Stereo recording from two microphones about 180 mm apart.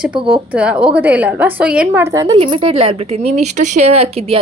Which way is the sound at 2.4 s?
30° right (ahead or behind).